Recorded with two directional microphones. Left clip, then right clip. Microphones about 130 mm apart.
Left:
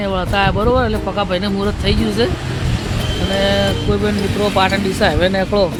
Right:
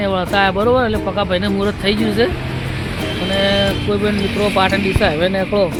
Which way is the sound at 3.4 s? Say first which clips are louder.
Even; 10° left (ahead or behind).